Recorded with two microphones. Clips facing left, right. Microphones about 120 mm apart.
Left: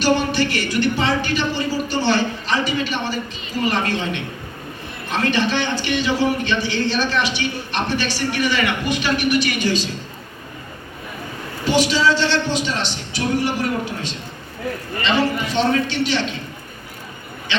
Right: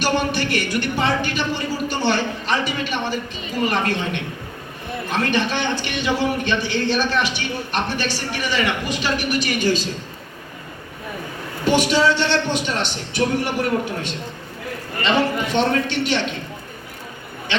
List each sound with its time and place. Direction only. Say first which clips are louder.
0.0 s speech: left 3 dB; 55° right (ahead or behind)
5.3 s speech: left 3 dB; 50° right (ahead or behind)
8.5 s speech: left 1 dB; 35° right (ahead or behind)
11.6 s a man's voice: even; 55° right (ahead or behind)
15.5 s a man's voice: left 1 dB; 55° right (ahead or behind)
17.5 s speech: right 1 dB; 55° right (ahead or behind)